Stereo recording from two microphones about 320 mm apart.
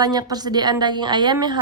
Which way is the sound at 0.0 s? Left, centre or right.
Centre.